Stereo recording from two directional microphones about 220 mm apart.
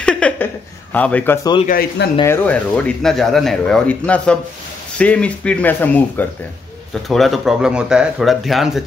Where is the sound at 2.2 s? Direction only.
10° left (ahead or behind).